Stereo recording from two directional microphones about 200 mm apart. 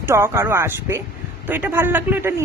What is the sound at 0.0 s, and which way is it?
Speech, 10° right (ahead or behind).